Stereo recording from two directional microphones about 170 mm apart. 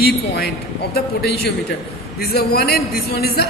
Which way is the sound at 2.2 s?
65° left (ahead or behind).